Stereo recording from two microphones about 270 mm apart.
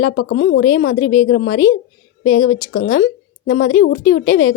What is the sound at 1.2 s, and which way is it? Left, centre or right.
Speech, left.